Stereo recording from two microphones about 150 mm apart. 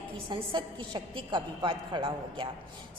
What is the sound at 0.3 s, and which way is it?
A woman's voice, 35° right (ahead or behind).